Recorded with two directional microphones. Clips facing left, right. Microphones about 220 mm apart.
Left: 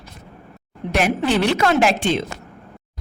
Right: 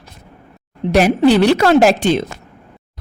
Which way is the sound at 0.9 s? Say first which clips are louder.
Right 8 dB; 35° right (ahead or behind).